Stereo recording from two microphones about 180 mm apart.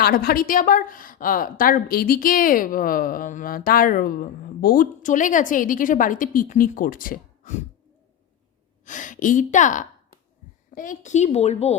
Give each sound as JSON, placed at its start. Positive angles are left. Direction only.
{"t": 0.0, "sound": "a woman's voice", "side_deg": 55}
{"t": 8.8, "sound": "a woman's voice", "side_deg": 45}